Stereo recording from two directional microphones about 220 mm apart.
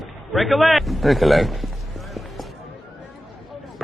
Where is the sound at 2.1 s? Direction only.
Centre (ahead or behind).